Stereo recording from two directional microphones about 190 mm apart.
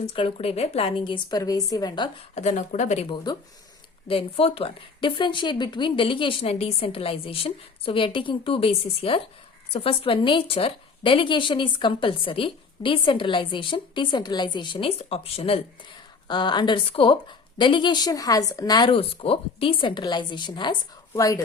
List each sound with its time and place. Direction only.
0.0 s a woman's voice: 30° left (ahead or behind)
2.3 s a woman's voice: 40° left (ahead or behind); by 21.4 s 20° left (ahead or behind)